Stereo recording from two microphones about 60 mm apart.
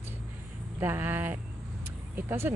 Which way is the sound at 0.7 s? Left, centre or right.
Right.